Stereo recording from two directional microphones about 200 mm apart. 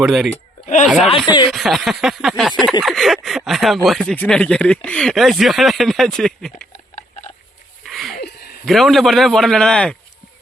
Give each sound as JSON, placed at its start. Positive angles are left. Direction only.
{"t": 0.0, "sound": "speech", "side_deg": 0}
{"t": 0.6, "sound": "speech", "side_deg": 40}
{"t": 0.9, "sound": "speech", "side_deg": 0}
{"t": 7.9, "sound": "a sound", "side_deg": 0}
{"t": 8.1, "sound": "a sound", "side_deg": 50}
{"t": 8.6, "sound": "speech", "side_deg": 0}